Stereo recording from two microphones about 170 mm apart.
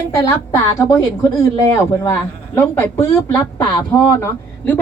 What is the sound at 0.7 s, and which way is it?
A man's voice, 20° left (ahead or behind).